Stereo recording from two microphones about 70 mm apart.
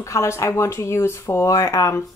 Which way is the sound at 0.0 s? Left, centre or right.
Left.